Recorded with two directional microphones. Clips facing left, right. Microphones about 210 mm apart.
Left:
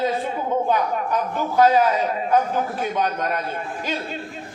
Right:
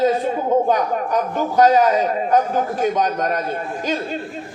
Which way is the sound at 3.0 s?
40° right (ahead or behind).